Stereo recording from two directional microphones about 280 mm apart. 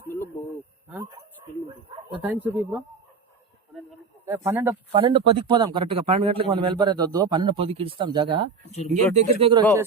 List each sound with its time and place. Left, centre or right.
2.2 s speech: centre
4.3 s speech: centre